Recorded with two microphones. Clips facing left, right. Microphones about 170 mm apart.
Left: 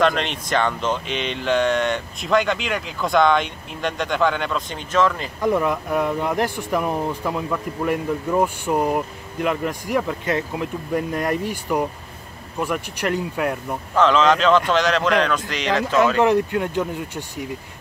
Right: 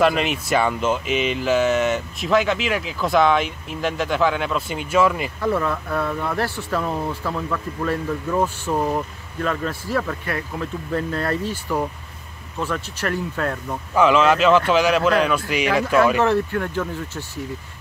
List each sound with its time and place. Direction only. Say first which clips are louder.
0.0 s speech: right 1 dB; 5° right (ahead or behind)
5.4 s speech: left 3 dB; 15° left (ahead or behind)
13.9 s speech: right 1 dB; 10° right (ahead or behind)
16.2 s speech: left 2 dB; 15° left (ahead or behind)